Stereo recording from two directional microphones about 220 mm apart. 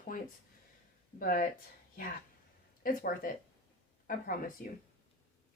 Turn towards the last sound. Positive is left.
turn(degrees=40)  # may be behind; listen again after turning